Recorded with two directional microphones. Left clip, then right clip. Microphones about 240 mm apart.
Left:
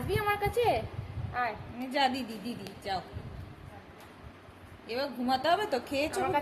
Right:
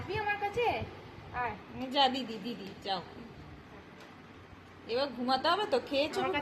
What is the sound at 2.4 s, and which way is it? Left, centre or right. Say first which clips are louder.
Speech: left 1 dB; centre.